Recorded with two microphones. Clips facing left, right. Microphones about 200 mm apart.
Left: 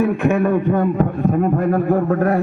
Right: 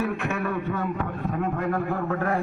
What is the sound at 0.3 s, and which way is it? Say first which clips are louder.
A man's voice: left 11 dB; 50° left (ahead or behind).